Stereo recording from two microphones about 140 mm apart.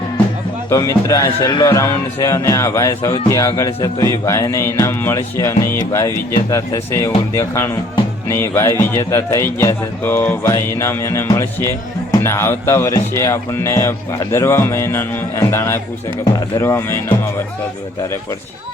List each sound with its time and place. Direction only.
0.7 s speech: 25° left (ahead or behind)